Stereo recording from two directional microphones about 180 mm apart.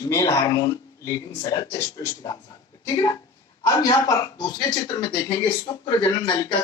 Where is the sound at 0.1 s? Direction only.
15° left (ahead or behind).